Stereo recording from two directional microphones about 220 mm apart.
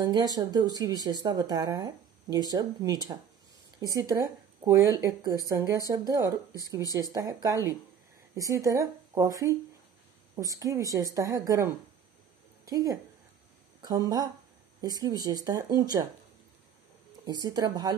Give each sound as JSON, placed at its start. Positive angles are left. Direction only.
{"t": 0.0, "sound": "speech", "side_deg": -20}
{"t": 17.3, "sound": "speech", "side_deg": -20}